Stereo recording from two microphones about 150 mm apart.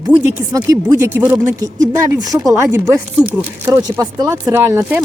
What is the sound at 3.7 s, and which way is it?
Speech, 25° right (ahead or behind).